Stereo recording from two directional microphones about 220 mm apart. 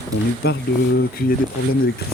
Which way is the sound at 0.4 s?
45° left (ahead or behind).